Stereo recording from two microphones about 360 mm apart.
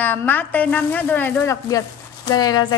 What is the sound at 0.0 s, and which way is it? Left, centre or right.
A woman's voice, centre.